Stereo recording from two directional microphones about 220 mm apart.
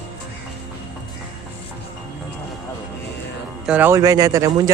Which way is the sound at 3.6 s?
5° right (ahead or behind).